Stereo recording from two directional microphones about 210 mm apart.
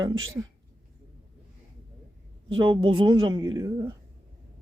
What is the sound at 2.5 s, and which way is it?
A woman's voice, 25° right (ahead or behind).